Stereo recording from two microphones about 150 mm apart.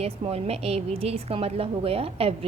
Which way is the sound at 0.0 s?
45° right (ahead or behind).